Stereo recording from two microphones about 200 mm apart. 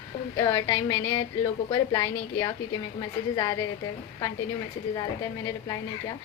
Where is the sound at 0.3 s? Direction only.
15° left (ahead or behind).